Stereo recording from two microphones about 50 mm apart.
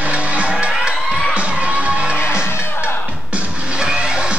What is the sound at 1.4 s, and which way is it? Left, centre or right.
Music, right.